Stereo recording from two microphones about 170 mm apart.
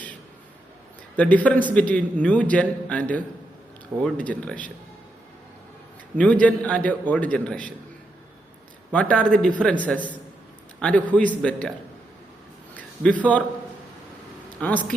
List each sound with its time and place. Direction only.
1.1 s a man's voice: 10° left (ahead or behind)
6.4 s a man's voice: 5° left (ahead or behind)
8.9 s a man's voice: 5° left (ahead or behind)
12.7 s a sound: 5° left (ahead or behind)
14.6 s a man's voice: 10° left (ahead or behind)